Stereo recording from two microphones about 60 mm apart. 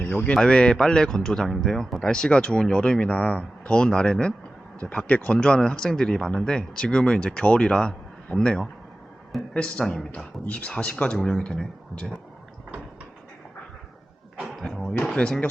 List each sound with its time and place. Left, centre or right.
0.0 s speech: left
0.3 s speech: centre
10.1 s speech: left
14.5 s a sound: centre
15.0 s speech: centre